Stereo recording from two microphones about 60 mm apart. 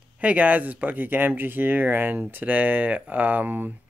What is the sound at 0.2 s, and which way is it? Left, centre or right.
A man's voice, right.